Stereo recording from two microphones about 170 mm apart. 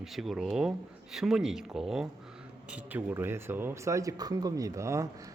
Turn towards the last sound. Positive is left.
turn(degrees=-15)  # may be behind; listen again after turning